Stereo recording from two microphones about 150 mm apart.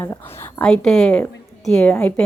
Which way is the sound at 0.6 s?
5° left (ahead or behind).